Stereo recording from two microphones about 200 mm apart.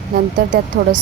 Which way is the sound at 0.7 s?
60° right (ahead or behind).